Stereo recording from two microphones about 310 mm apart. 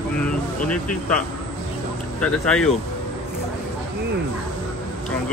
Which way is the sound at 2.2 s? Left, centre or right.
Centre.